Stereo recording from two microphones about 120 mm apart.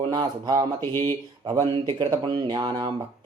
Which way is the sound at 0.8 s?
20° left (ahead or behind).